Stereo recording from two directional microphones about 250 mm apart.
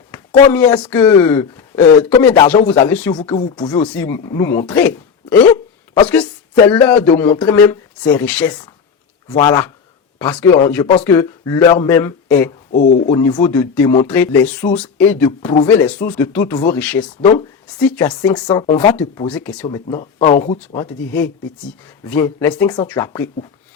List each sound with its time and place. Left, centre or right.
0.5 s speech: centre
3.8 s speech: centre
9.4 s speech: centre
12.7 s speech: left
13.1 s speech: centre
18.4 s speech: centre
19.3 s speech: centre
20.0 s speech: left
20.6 s speech: centre